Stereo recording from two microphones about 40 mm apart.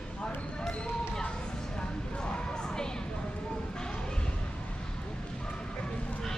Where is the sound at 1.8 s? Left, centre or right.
Left.